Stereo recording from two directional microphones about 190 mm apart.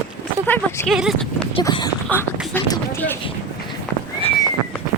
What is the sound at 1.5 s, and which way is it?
Speech, 25° left (ahead or behind).